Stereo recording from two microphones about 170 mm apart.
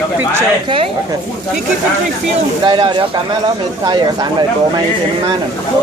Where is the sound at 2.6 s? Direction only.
30° right (ahead or behind).